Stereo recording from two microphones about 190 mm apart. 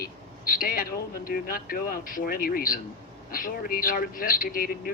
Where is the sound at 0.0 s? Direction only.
50° left (ahead or behind).